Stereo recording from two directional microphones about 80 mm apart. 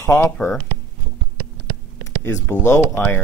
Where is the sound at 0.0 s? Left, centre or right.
Left.